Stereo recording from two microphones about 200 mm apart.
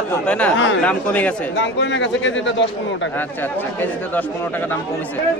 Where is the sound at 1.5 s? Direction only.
60° left (ahead or behind).